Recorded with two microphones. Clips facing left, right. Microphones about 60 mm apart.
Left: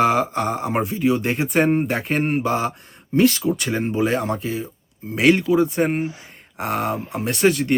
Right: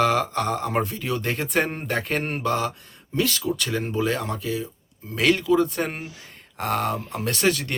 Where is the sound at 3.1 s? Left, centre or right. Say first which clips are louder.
Left 7 dB; left.